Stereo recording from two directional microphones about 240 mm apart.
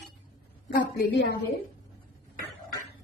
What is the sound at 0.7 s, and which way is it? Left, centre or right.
Speech, left.